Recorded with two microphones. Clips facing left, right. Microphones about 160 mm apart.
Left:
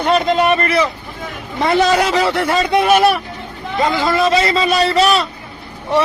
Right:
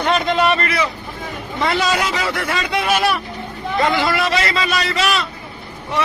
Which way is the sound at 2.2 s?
30° left (ahead or behind).